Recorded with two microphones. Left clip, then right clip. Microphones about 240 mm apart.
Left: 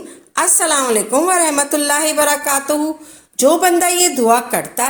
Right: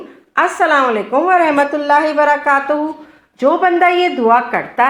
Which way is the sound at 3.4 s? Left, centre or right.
Left.